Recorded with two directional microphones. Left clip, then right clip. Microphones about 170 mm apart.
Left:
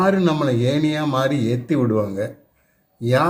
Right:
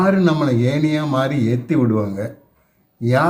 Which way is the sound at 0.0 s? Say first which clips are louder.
Right 1 dB; 10° left (ahead or behind).